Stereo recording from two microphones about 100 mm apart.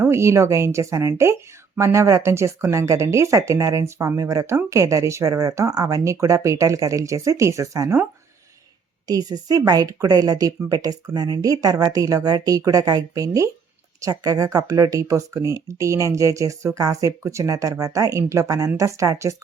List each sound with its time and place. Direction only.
0.0 s speech: 25° right (ahead or behind)
9.0 s speech: 40° right (ahead or behind)